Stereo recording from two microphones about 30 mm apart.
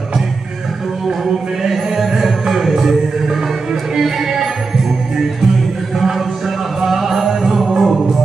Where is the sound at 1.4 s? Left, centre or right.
Centre.